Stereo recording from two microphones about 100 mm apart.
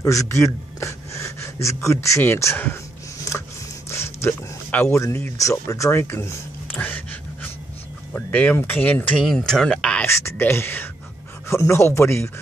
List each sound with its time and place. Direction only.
0.0 s speech: 35° left (ahead or behind)
3.9 s a sound: 25° left (ahead or behind)
5.0 s speech: 30° left (ahead or behind)
8.1 s speech: 15° left (ahead or behind)
9.2 s speech: centre (ahead or behind)
10.0 s speech: 25° left (ahead or behind)